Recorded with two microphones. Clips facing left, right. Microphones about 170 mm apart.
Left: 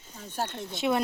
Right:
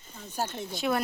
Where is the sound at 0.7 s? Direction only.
25° left (ahead or behind).